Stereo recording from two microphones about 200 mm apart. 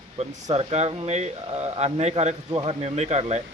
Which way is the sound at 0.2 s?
35° right (ahead or behind).